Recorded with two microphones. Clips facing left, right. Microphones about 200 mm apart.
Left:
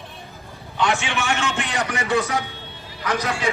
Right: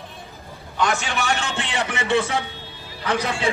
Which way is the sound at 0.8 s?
40° right (ahead or behind).